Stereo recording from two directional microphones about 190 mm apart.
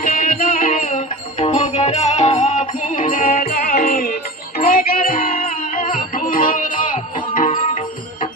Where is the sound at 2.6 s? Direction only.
45° left (ahead or behind).